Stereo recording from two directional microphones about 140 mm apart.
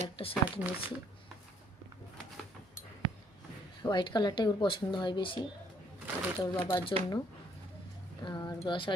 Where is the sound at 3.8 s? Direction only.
35° left (ahead or behind).